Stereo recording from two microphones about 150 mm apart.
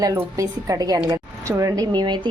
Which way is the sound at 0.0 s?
20° right (ahead or behind).